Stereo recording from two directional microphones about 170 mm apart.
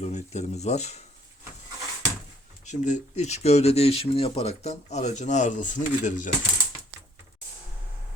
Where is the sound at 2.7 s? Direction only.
45° left (ahead or behind).